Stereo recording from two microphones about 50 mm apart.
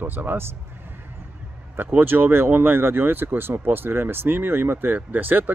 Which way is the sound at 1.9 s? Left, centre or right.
Right.